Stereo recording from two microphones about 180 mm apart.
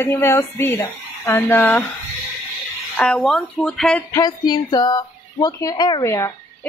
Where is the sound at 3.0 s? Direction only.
5° left (ahead or behind).